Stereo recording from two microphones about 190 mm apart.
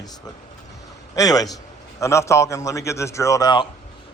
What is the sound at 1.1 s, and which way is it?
A man's voice, 20° left (ahead or behind).